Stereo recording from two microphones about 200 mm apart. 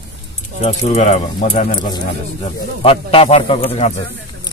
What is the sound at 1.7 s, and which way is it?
Speech, 20° left (ahead or behind).